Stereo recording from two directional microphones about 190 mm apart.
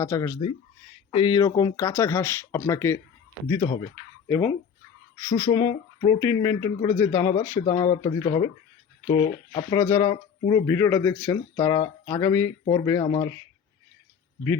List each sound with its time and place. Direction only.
0.0 s speech: 15° left (ahead or behind)
9.5 s speech: 30° left (ahead or behind)
9.7 s speech: 15° left (ahead or behind)
13.0 s speech: 30° left (ahead or behind)